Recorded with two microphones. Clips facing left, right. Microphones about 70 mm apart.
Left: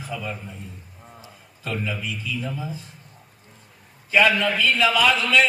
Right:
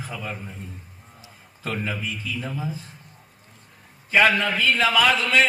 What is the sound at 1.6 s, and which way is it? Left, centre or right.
A man's voice, right.